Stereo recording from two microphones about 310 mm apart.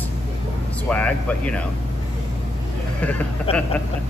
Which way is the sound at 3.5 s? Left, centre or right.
Centre.